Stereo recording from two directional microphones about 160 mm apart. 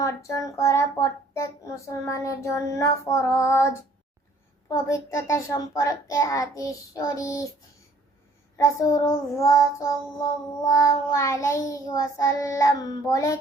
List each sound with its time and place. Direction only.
0.0 s child singing: 20° left (ahead or behind)
8.5 s child singing: 20° left (ahead or behind)